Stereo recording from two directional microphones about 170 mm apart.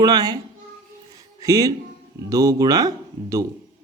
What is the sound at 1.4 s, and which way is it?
Speech, 20° right (ahead or behind).